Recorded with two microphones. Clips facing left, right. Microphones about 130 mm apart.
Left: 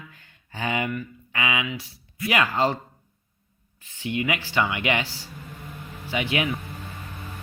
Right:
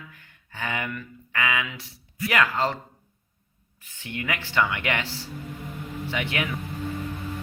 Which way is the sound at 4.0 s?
15° left (ahead or behind).